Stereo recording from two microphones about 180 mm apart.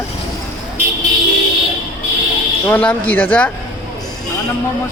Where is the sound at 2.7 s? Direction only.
10° left (ahead or behind).